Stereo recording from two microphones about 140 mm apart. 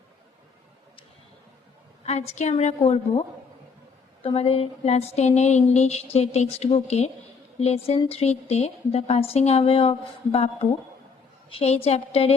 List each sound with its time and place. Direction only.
2.0 s speech: 50° left (ahead or behind)
11.4 s speech: 45° left (ahead or behind)